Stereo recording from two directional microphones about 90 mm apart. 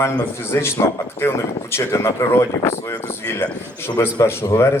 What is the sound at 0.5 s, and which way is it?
Speech, 30° left (ahead or behind).